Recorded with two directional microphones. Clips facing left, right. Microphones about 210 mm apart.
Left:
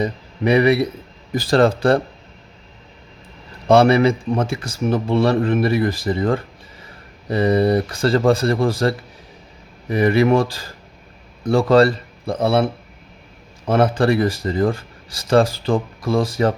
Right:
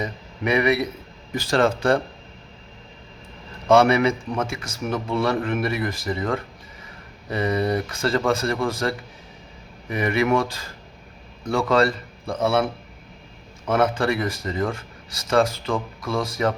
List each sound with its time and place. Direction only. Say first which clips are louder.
0.0 s speech: left 6 dB; 30° left (ahead or behind)
3.7 s speech: left 4 dB; 35° left (ahead or behind)
13.7 s speech: left 4 dB; 30° left (ahead or behind)